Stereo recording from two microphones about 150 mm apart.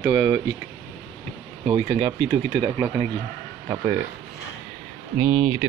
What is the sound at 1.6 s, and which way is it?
Speech, 35° right (ahead or behind).